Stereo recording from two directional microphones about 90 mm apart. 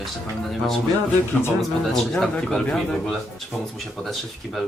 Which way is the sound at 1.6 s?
Centre (ahead or behind).